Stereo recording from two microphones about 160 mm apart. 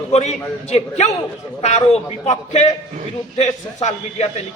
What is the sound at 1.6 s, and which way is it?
A man's voice, 40° left (ahead or behind).